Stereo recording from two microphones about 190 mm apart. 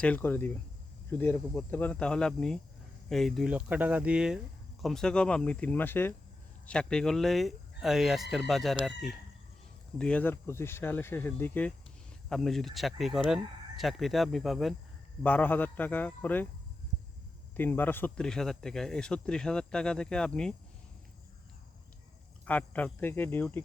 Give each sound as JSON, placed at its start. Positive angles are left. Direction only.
{"t": 0.0, "sound": "speech", "side_deg": 10}
{"t": 17.6, "sound": "speech", "side_deg": 10}
{"t": 22.4, "sound": "speech", "side_deg": 10}